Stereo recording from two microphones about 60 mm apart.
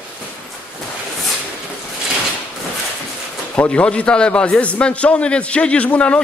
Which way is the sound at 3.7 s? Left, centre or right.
Centre.